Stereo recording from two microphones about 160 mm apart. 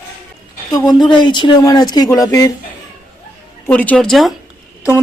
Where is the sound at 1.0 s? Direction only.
30° left (ahead or behind).